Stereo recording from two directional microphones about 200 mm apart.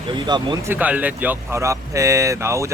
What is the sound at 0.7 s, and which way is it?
Speech, 10° right (ahead or behind).